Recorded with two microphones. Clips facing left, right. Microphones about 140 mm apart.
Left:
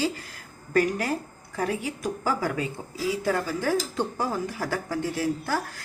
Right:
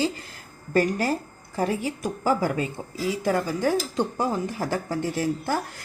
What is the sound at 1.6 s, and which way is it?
Speech, 25° right (ahead or behind).